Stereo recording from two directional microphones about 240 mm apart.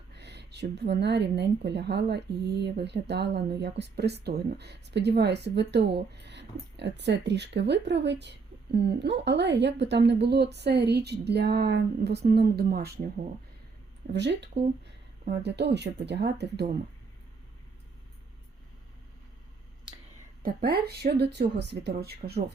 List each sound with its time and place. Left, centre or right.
0.1 s speech: right
14.1 s speech: right
20.4 s speech: right